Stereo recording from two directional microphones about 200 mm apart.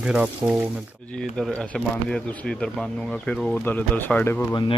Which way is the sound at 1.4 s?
5° left (ahead or behind).